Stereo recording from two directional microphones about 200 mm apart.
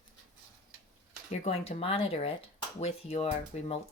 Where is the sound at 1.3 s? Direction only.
30° left (ahead or behind).